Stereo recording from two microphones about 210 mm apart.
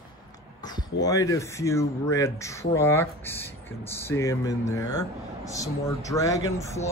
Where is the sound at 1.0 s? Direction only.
15° left (ahead or behind).